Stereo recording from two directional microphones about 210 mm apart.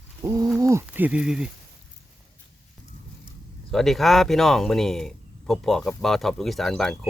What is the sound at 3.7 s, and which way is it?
Speech, centre (ahead or behind).